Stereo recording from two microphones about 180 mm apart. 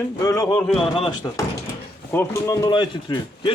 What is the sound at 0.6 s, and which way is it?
Speech, centre (ahead or behind).